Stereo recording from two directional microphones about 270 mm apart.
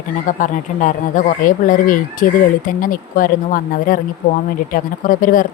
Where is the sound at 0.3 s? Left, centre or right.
Left.